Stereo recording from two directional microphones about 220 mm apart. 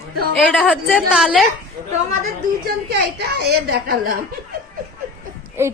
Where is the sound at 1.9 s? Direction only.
35° right (ahead or behind).